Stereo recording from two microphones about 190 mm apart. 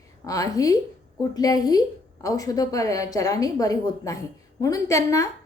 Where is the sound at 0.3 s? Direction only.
20° left (ahead or behind).